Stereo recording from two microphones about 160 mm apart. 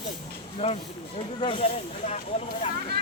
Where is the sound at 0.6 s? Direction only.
35° left (ahead or behind).